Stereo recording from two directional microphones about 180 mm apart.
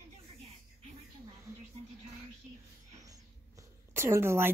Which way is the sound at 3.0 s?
20° right (ahead or behind).